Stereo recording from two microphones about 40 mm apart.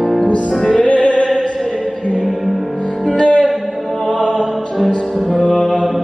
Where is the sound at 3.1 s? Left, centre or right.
Left.